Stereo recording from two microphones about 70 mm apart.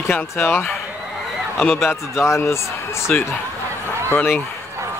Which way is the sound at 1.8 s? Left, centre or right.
Left.